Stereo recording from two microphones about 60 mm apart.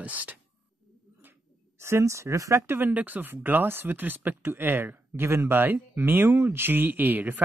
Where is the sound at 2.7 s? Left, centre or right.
Right.